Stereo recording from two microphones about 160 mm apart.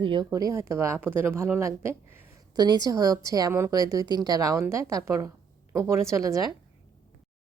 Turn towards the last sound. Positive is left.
turn(degrees=-20)  # may be behind; listen again after turning